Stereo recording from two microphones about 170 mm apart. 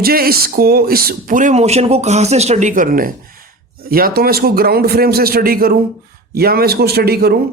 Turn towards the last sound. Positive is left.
turn(degrees=-65)  # may be behind; listen again after turning